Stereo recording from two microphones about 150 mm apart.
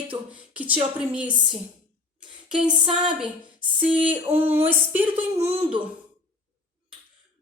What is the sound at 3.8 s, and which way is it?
Speech, 35° right (ahead or behind).